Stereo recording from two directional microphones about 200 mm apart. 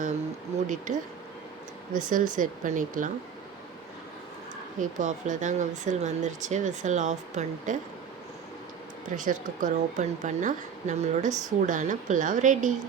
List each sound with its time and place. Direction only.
0.9 s speech: 40° right (ahead or behind)
4.8 s speech: 40° right (ahead or behind)
9.0 s speech: 40° right (ahead or behind)